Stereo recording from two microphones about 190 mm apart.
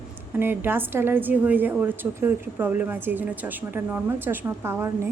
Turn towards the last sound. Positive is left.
turn(degrees=-15)  # may be behind; listen again after turning